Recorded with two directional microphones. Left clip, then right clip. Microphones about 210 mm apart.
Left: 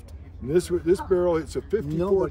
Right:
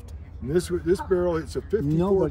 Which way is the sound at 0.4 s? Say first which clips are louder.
Left 2 dB; 45° left (ahead or behind).